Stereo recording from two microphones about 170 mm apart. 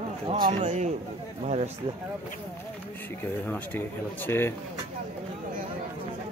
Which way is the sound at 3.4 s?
10° left (ahead or behind).